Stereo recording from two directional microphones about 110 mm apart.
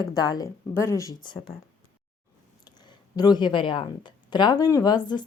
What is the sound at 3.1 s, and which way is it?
Speech, 35° left (ahead or behind).